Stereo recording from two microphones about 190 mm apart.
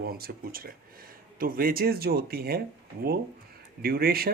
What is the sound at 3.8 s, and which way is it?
Speech, 50° right (ahead or behind).